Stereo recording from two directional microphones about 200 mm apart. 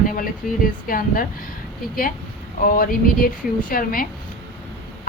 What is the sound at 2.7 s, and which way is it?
A woman's voice, 45° left (ahead or behind).